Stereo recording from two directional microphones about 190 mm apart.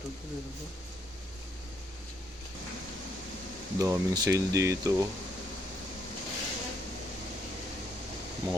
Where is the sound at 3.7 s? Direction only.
15° right (ahead or behind).